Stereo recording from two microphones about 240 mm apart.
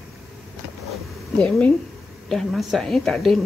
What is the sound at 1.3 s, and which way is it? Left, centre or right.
A woman's voice, centre.